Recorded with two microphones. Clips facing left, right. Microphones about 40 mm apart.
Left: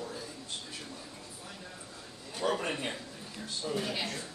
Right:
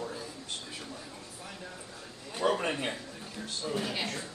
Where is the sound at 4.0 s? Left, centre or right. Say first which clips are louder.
Right 1 dB; centre.